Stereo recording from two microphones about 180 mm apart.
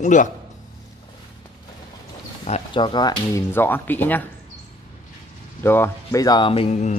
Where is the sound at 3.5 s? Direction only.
10° left (ahead or behind).